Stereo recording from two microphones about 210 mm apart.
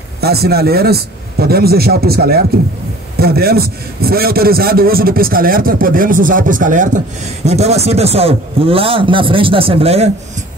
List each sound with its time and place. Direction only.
0.2 s a man's voice: 50° right (ahead or behind); by 10.1 s 30° right (ahead or behind)